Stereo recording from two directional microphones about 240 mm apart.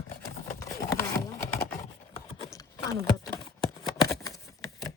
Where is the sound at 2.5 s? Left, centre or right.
Centre.